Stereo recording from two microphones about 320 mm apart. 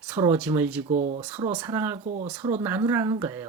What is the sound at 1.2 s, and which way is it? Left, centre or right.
Speech, centre.